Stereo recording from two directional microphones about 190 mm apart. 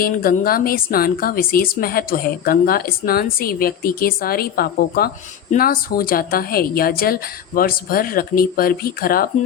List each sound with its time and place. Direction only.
0.0 s a woman's voice: 50° left (ahead or behind)